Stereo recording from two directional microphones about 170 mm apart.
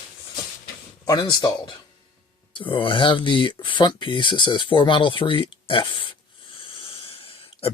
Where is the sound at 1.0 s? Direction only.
25° left (ahead or behind).